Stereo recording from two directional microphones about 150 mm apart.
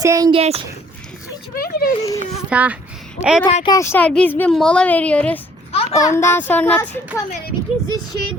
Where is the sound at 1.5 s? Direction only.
80° left.